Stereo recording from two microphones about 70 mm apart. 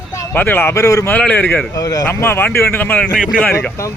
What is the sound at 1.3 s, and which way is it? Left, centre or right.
Speech, left.